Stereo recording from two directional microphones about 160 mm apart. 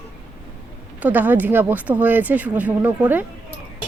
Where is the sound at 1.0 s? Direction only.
10° right (ahead or behind).